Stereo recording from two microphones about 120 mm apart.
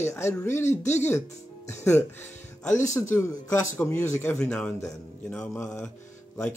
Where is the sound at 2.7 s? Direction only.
90° left.